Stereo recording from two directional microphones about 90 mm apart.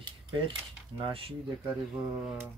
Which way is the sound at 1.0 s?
85° right.